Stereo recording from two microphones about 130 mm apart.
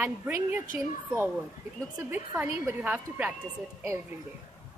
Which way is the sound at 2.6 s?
10° right (ahead or behind).